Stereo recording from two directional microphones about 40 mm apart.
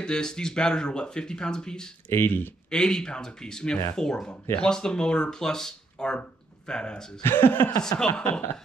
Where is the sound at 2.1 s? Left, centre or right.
Left.